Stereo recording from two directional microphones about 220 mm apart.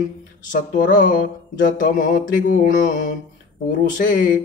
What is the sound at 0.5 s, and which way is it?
Mantra, 35° left (ahead or behind).